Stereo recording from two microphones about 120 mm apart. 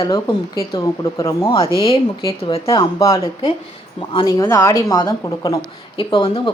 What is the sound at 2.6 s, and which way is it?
Speech, 30° left (ahead or behind).